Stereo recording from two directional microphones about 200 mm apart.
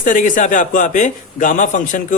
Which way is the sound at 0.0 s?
40° left (ahead or behind).